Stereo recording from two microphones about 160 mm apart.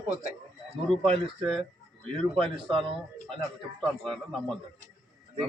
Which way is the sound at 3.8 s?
Centre (ahead or behind).